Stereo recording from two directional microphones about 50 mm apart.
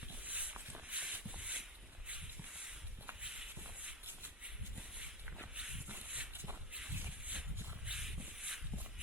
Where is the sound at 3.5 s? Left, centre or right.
Right.